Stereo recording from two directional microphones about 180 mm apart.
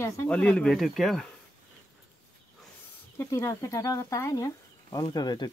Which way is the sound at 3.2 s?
15° left (ahead or behind).